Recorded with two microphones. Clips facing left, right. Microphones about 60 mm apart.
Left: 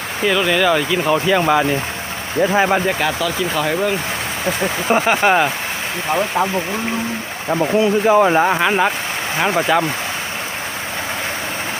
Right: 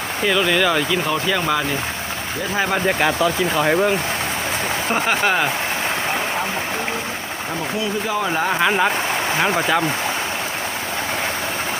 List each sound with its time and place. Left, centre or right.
0.3 s speech: centre
1.0 s speech: centre
2.8 s speech: centre
4.9 s speech: centre
7.8 s speech: left
8.5 s speech: centre